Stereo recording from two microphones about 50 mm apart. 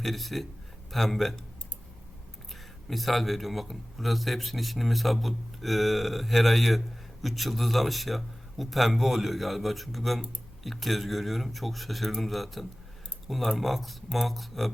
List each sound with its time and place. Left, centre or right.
0.0 s a man's voice: centre
2.5 s a man's voice: centre